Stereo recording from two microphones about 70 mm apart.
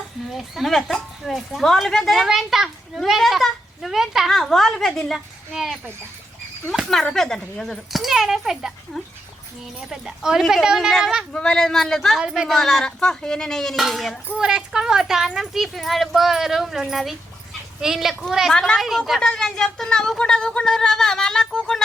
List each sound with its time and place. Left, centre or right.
0.3 s a woman's voice: centre
8.0 s a woman's voice: centre
9.9 s a woman's voice: centre
11.3 s speech: centre
14.3 s a woman's voice: centre
18.5 s speech: centre
18.8 s a woman's voice: centre